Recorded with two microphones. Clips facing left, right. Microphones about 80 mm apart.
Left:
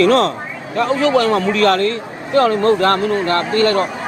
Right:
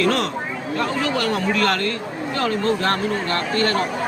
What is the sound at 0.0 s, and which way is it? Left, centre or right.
A man's voice, left.